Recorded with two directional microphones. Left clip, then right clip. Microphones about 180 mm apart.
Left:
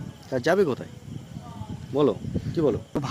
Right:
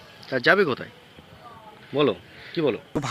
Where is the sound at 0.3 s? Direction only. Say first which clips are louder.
Right 3 dB; 25° left (ahead or behind).